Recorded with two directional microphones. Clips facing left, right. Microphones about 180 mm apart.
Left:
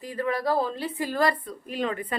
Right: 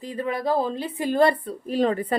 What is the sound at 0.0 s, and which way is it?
A woman's voice, 20° right (ahead or behind).